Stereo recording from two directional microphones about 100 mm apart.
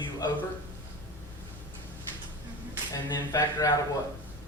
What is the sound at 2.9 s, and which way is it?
Speech, 40° left (ahead or behind).